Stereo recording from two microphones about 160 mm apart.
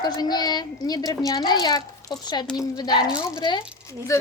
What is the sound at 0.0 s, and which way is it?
A woman's voice, 25° left (ahead or behind).